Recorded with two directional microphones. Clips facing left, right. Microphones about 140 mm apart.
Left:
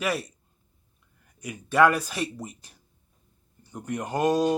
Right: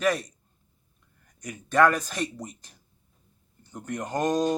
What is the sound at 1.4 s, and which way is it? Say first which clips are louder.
Speech: left 1 dB; 10° left (ahead or behind).